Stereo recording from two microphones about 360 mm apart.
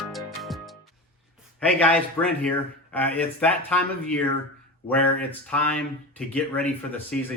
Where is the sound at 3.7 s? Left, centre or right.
Centre.